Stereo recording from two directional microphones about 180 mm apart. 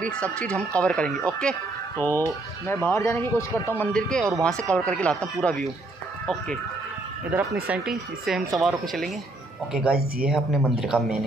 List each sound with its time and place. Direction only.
0.0 s speech: 5° left (ahead or behind)
7.6 s speech: 5° right (ahead or behind)